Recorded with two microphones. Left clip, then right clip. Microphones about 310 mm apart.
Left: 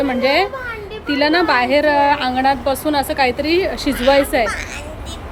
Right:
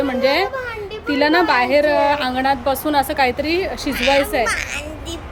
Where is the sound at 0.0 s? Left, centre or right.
Centre.